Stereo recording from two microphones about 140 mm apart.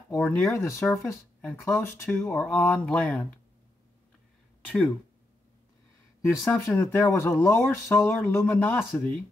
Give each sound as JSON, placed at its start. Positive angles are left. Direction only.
{"t": 0.5, "sound": "speech", "side_deg": 20}
{"t": 4.6, "sound": "a sound", "side_deg": 10}
{"t": 6.2, "sound": "speech", "side_deg": 15}